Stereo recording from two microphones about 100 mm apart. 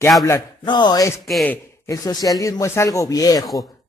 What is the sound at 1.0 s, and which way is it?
Speech, 30° left (ahead or behind).